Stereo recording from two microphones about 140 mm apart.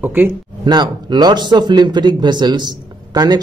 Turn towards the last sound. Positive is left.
turn(degrees=-30)  # may be behind; listen again after turning